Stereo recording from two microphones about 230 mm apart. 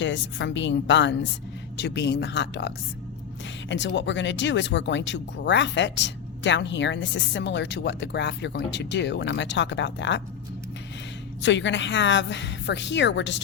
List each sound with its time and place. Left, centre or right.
0.0 s speech: left
11.4 s speech: left